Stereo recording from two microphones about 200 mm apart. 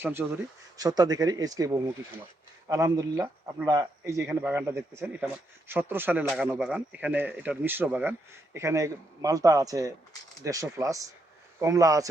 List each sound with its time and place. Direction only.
0.0 s speech: 10° right (ahead or behind)